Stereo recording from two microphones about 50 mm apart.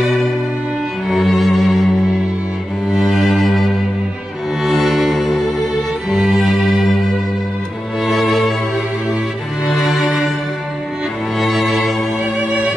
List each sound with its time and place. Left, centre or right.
1.0 s music: centre
2.9 s cello: centre
4.6 s music: centre
8.0 s music: centre
9.7 s music: centre
11.3 s music: centre
12.4 s music: right